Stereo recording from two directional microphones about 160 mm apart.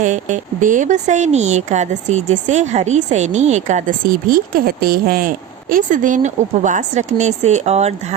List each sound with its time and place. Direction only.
0.0 s speech: 50° right (ahead or behind)